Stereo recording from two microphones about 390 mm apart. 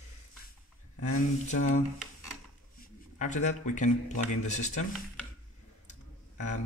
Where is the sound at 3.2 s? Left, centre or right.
Centre.